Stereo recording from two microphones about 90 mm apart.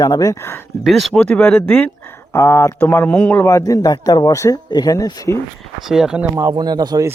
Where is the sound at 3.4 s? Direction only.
35° left (ahead or behind).